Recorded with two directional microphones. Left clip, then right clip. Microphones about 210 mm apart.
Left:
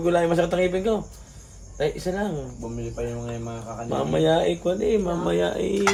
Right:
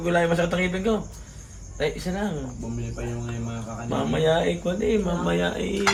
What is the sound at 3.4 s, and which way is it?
A man's voice, 55° left (ahead or behind).